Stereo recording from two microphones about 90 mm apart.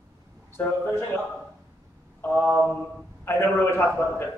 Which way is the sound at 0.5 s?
25° left (ahead or behind).